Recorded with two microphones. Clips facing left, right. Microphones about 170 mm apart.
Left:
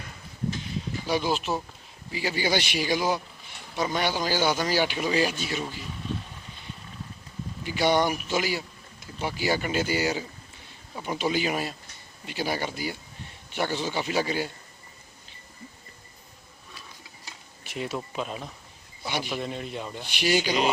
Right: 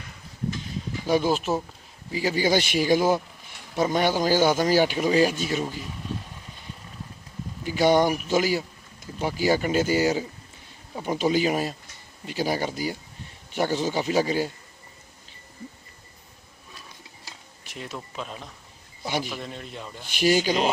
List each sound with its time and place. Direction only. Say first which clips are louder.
1.0 s a man's voice: right 5 dB; 45° right (ahead or behind)
7.6 s a man's voice: right 4 dB; 45° right (ahead or behind)
17.7 s speech: left 5 dB; 5° left (ahead or behind)
19.0 s a man's voice: right 3 dB; 45° right (ahead or behind)
19.3 s speech: left 4 dB; 5° left (ahead or behind)
20.1 s a man's voice: right 4 dB; 45° right (ahead or behind)